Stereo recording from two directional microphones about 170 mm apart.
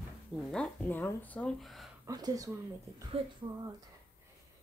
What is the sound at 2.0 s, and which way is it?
Speech, 20° right (ahead or behind).